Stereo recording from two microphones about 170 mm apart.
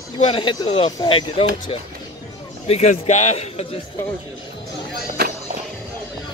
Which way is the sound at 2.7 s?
45° left (ahead or behind).